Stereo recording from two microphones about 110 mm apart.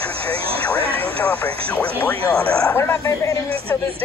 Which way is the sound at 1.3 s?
15° left (ahead or behind).